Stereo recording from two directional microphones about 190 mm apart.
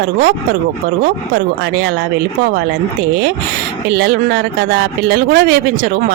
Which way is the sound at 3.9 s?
55° right (ahead or behind).